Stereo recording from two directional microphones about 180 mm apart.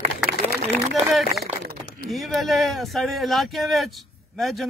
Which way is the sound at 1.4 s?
60° right (ahead or behind).